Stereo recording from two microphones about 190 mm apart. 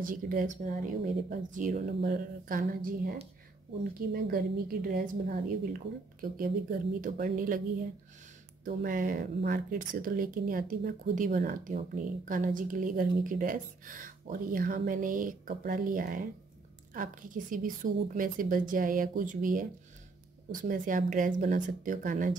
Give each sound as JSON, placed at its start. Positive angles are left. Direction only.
{"t": 0.0, "sound": "speech", "side_deg": -45}
{"t": 8.6, "sound": "speech", "side_deg": -45}